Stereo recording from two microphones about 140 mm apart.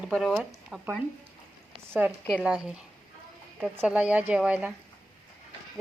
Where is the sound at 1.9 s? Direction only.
10° right (ahead or behind).